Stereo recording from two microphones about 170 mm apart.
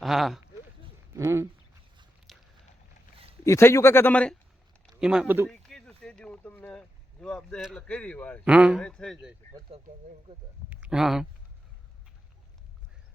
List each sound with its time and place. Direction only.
0.0 s speech: centre (ahead or behind)
1.1 s a sound: 15° right (ahead or behind)
2.3 s a sound: centre (ahead or behind)
3.4 s speech: 15° left (ahead or behind)
4.9 s speech: 5° right (ahead or behind)
5.5 s speech: 5° left (ahead or behind)
8.4 s speech: 5° right (ahead or behind)
8.8 s speech: 5° left (ahead or behind)
9.7 s speech: 35° right (ahead or behind)
10.7 s a sound: 10° right (ahead or behind)